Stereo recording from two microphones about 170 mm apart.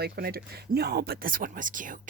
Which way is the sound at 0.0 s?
70° right (ahead or behind).